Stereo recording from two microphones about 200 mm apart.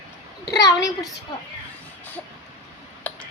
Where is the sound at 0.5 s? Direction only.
20° left (ahead or behind).